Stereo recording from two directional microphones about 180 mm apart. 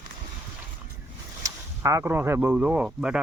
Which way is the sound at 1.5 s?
15° right (ahead or behind).